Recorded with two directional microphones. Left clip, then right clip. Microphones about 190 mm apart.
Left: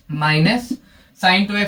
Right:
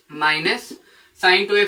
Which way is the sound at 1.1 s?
20° right (ahead or behind).